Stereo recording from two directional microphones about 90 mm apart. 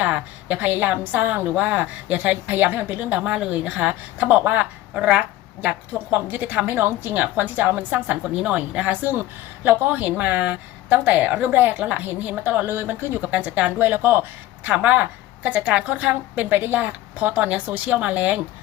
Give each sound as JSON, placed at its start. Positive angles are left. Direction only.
{"t": 0.0, "sound": "a woman's voice", "side_deg": -15}
{"t": 3.2, "sound": "a woman's voice", "side_deg": -10}